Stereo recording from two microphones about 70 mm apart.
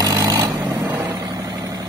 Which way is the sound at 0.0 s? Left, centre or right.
Right.